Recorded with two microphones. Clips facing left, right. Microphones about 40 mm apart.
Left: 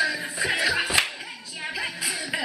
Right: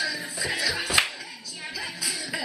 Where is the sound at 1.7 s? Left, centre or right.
Left.